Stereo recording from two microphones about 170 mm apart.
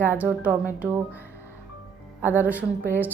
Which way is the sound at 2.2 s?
10° right (ahead or behind).